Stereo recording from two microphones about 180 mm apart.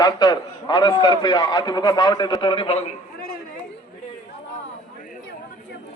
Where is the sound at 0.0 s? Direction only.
20° left (ahead or behind).